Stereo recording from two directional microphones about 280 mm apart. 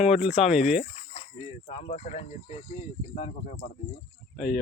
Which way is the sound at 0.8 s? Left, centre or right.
Left.